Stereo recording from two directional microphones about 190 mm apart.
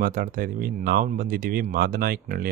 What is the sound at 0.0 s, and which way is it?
Speech, 50° right (ahead or behind).